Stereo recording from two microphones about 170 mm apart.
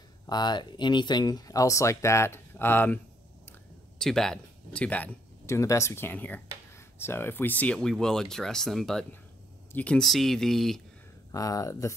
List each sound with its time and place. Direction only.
0.3 s speech: 25° left (ahead or behind)
4.0 s speech: 5° left (ahead or behind)
11.3 s speech: 20° left (ahead or behind)